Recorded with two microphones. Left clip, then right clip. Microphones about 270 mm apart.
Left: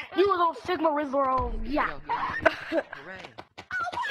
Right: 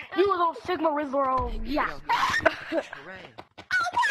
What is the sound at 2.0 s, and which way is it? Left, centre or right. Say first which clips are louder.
Speech: right 5 dB; right.